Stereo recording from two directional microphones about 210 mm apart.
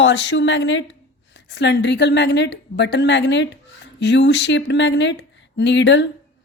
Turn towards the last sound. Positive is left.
turn(degrees=55)  # may be behind; listen again after turning